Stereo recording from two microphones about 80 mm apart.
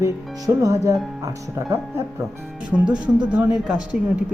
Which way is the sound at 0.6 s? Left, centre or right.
Right.